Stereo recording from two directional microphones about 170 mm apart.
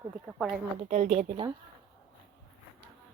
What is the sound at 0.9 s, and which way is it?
Speech, 40° right (ahead or behind).